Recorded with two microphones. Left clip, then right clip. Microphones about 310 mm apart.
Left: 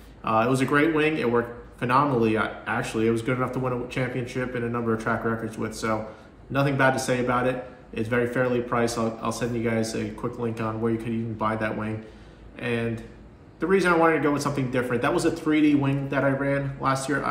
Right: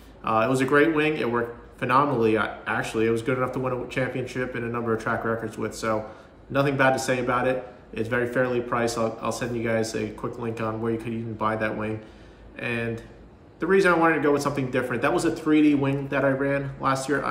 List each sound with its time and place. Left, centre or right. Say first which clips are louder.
0.2 s a man's voice: even; centre